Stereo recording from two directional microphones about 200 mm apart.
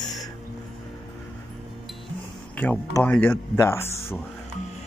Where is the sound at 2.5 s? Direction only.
5° left (ahead or behind).